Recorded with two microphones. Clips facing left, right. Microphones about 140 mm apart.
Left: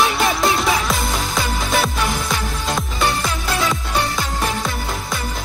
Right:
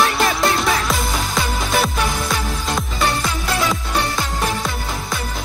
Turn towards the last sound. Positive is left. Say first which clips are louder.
# even
turn(degrees=0)  # may be behind; listen again after turning